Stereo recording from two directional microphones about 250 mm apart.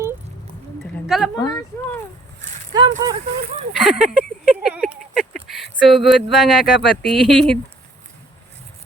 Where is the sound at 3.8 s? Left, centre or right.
Centre.